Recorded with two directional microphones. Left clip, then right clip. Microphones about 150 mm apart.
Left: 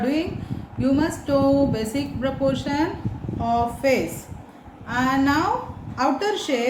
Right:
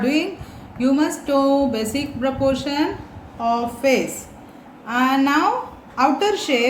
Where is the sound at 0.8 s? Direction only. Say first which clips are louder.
Right 3 dB; 30° right (ahead or behind).